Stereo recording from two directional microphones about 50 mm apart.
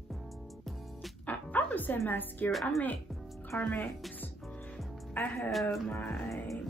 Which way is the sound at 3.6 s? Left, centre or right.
Left.